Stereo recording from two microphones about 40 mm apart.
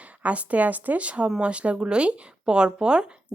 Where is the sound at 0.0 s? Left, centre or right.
Right.